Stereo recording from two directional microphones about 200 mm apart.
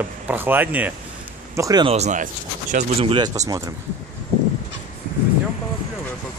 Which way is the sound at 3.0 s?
30° right (ahead or behind).